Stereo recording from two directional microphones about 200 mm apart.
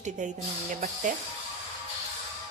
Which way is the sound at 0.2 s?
40° right (ahead or behind).